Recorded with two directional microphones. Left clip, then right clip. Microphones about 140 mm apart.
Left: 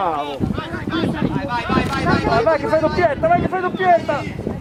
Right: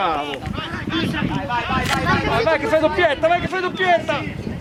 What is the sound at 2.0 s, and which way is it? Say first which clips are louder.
Speech: left 3 dB; 40° right (ahead or behind).